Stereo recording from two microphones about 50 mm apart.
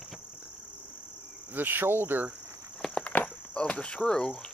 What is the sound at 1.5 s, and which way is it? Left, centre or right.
Speech, right.